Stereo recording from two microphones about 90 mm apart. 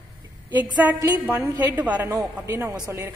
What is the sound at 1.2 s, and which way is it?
Speech, 20° right (ahead or behind).